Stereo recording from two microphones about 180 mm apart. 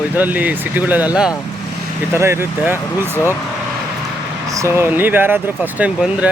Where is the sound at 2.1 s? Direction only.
15° right (ahead or behind).